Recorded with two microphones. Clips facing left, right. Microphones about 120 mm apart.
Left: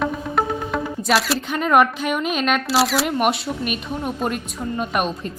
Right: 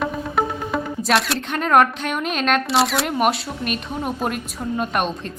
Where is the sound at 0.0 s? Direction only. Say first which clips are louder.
Even; centre (ahead or behind).